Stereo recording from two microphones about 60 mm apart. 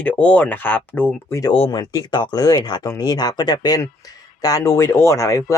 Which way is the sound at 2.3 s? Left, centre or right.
Left.